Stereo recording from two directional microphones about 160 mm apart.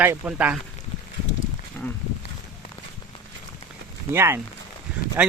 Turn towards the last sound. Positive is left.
turn(degrees=-10)  # may be behind; listen again after turning